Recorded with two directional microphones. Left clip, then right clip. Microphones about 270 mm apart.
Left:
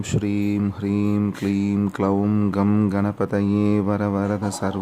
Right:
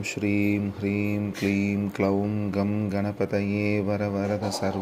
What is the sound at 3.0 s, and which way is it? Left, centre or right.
Speech, centre.